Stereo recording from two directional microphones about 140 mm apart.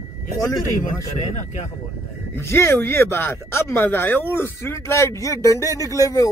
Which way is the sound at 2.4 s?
20° left (ahead or behind).